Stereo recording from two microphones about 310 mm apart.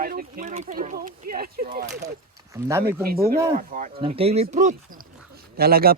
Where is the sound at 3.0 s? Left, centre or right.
Right.